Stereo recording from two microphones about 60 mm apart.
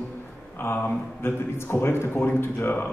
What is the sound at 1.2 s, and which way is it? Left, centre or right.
A man's voice, left.